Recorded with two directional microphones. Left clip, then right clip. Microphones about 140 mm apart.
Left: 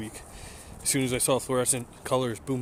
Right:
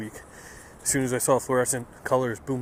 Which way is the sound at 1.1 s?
Centre (ahead or behind).